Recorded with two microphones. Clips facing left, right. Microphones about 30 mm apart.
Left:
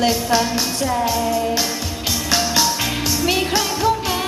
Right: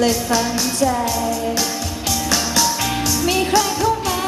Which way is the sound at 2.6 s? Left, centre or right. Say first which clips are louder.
Right 1 dB; left.